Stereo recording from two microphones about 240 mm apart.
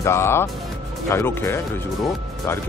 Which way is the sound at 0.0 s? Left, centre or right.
Centre.